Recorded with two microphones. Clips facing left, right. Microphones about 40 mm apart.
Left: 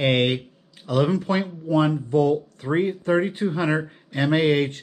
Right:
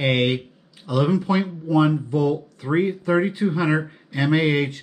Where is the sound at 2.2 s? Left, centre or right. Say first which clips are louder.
Left 4 dB; right.